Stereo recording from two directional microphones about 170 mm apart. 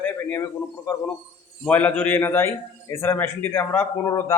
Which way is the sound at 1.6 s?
10° left (ahead or behind).